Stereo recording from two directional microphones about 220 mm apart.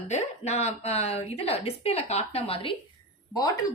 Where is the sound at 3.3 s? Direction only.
15° left (ahead or behind).